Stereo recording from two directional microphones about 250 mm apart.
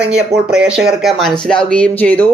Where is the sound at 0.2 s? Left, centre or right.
Centre.